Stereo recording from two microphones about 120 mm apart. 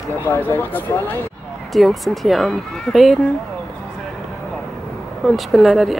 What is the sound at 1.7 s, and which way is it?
Speech, centre (ahead or behind).